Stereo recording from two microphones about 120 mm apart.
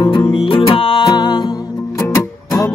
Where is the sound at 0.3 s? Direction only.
45° left (ahead or behind).